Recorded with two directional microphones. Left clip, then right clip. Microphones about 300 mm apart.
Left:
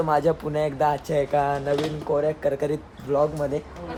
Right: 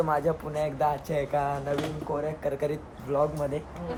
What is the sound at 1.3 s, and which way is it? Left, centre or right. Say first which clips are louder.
Speech: left 5 dB; left.